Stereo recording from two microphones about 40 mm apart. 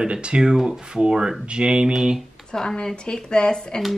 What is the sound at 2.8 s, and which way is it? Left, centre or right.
Speech, left.